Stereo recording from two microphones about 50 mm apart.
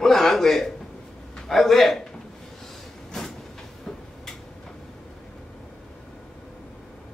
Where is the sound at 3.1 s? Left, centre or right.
Centre.